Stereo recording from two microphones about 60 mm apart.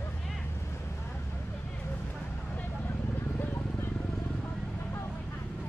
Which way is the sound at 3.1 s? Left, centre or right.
Left.